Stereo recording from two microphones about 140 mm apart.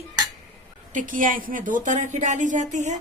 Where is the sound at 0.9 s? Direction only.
70° right (ahead or behind).